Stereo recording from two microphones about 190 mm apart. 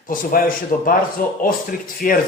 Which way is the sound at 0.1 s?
45° left (ahead or behind).